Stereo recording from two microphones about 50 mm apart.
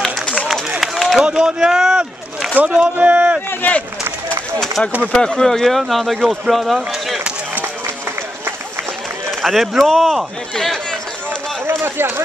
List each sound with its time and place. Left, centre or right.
0.7 s run: centre
1.2 s speech: centre
2.5 s speech: right
3.6 s run: left
4.8 s speech: left
5.2 s speech: centre
9.3 s speech: centre
11.8 s speech: right